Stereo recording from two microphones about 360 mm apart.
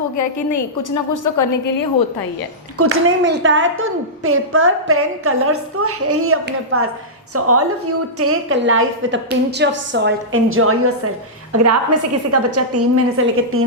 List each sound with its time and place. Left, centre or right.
0.2 s a woman's voice: left
2.7 s a woman's voice: right